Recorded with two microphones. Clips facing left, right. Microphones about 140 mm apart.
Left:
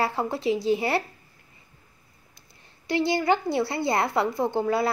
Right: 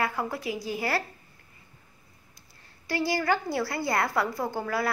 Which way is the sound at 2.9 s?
20° left (ahead or behind).